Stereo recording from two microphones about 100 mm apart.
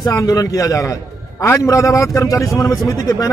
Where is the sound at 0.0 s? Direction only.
35° left (ahead or behind).